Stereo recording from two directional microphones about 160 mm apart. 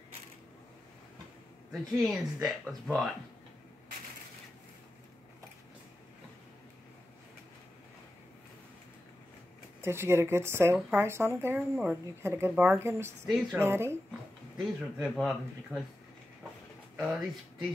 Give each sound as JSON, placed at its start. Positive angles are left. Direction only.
{"t": 1.7, "sound": "speech", "side_deg": 0}
{"t": 9.8, "sound": "speech", "side_deg": -15}
{"t": 14.6, "sound": "speech", "side_deg": 0}
{"t": 17.0, "sound": "speech", "side_deg": 0}